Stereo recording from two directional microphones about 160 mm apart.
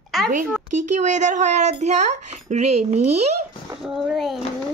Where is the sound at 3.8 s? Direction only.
Centre (ahead or behind).